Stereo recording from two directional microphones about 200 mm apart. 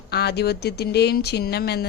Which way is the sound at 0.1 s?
55° left (ahead or behind).